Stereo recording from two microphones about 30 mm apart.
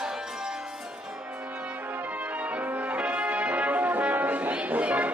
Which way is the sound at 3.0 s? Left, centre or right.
Right.